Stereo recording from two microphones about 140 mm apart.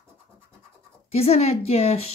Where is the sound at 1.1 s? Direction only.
45° left (ahead or behind).